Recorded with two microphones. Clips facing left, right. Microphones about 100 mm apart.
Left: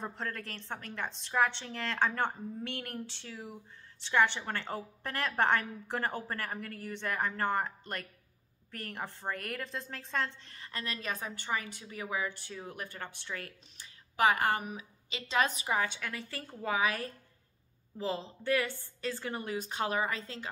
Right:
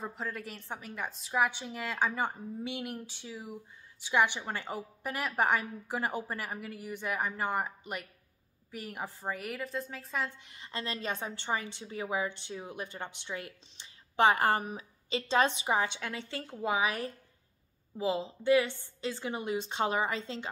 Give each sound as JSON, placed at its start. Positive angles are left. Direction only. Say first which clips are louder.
{"t": 0.0, "sound": "a woman's voice", "louder": "right 1 dB", "side_deg": -5}